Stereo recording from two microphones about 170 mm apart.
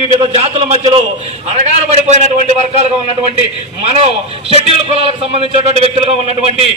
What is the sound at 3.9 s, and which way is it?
A man's voice, 35° right (ahead or behind).